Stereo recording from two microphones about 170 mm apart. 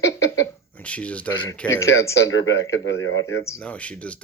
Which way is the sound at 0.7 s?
10° left (ahead or behind).